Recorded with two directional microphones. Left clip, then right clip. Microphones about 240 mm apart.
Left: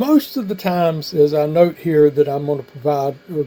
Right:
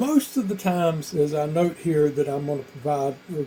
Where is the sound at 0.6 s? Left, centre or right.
Left.